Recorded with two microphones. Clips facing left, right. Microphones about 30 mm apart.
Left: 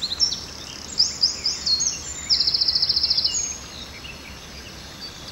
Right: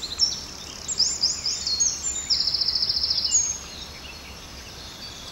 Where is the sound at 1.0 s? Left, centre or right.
Left.